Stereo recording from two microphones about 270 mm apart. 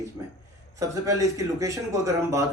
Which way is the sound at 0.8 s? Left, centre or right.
Centre.